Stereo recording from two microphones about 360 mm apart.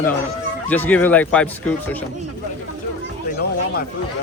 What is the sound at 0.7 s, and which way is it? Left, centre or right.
Speech, centre.